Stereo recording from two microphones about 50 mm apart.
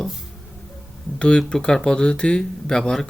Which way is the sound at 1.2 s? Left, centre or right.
Centre.